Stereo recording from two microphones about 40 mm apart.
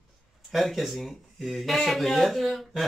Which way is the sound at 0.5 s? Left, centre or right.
Centre.